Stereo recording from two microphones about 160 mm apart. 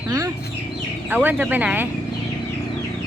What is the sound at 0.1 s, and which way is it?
Chicken, 20° right (ahead or behind).